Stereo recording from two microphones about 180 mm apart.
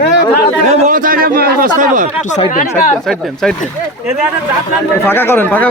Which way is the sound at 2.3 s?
45° left (ahead or behind).